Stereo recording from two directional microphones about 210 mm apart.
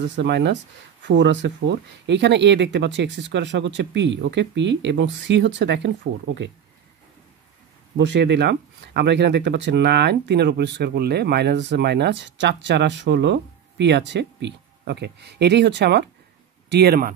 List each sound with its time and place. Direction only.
0.0 s speech: 55° right (ahead or behind)
8.0 s speech: 55° right (ahead or behind)